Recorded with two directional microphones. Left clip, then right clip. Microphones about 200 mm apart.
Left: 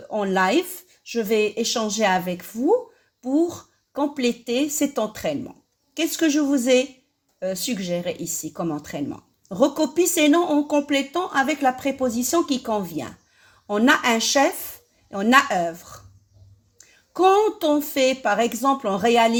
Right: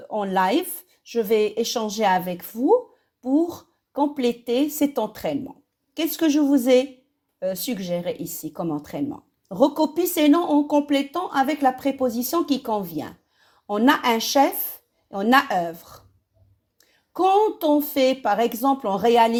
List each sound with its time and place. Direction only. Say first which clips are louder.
0.1 s a woman's voice: left 1 dB; 35° right (ahead or behind)
17.2 s speech: left 1 dB; 35° right (ahead or behind)